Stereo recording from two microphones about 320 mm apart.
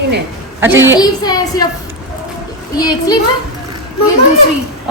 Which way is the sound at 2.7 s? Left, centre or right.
Centre.